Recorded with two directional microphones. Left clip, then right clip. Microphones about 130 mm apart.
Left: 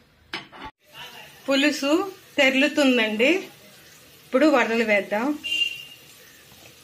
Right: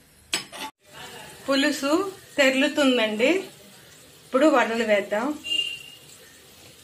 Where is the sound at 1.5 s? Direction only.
35° left (ahead or behind).